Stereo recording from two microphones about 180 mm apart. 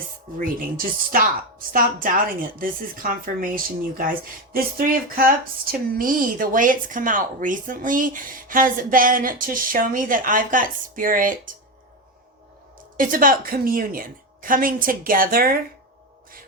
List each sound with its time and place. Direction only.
0.3 s speech: 50° right (ahead or behind)
5.1 s speech: 55° right (ahead or behind)
13.0 s speech: 50° right (ahead or behind)